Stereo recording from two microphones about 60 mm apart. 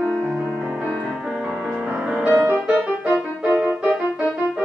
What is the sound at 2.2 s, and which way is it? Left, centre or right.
Music, right.